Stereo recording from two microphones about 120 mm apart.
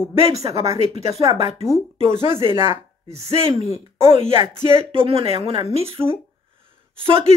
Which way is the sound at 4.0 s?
50° right (ahead or behind).